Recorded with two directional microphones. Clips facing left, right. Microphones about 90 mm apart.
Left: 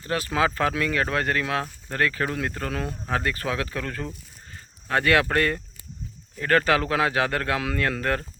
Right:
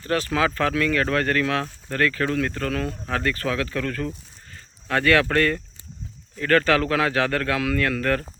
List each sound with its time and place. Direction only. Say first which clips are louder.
0.0 s speech: right 2 dB; 20° left (ahead or behind)